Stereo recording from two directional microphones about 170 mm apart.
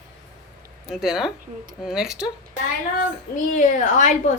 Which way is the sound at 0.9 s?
Centre (ahead or behind).